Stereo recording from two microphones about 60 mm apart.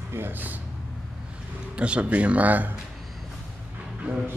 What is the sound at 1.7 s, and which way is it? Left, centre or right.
Speech, centre.